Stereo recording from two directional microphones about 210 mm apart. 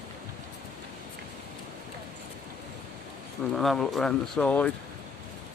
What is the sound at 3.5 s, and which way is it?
Speech, centre (ahead or behind).